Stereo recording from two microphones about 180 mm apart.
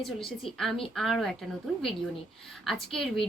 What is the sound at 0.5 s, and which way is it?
Speech, centre (ahead or behind).